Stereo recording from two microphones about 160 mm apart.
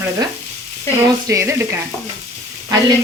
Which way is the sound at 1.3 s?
15° right (ahead or behind).